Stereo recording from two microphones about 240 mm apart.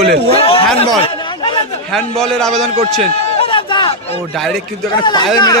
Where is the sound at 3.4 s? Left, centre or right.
Left.